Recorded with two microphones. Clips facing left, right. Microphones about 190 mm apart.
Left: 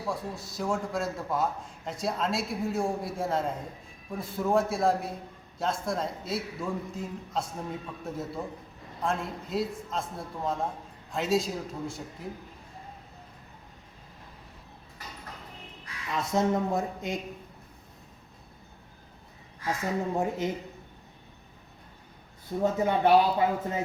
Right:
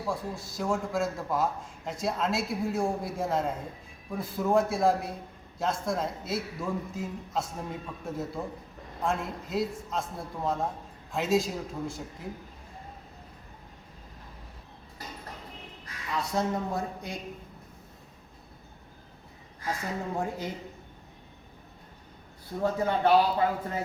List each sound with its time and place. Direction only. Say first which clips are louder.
0.1 s a man's voice: even; centre (ahead or behind)
16.1 s speech: left 3 dB; 20° left (ahead or behind)
20.1 s speech: left 4 dB; 20° left (ahead or behind)
22.6 s speech: left 1 dB; 20° left (ahead or behind)